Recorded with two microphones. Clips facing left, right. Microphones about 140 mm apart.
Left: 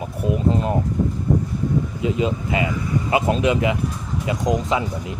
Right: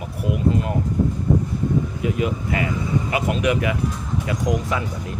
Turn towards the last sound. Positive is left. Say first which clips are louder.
# left 3 dB
turn(degrees=20)  # may be behind; listen again after turning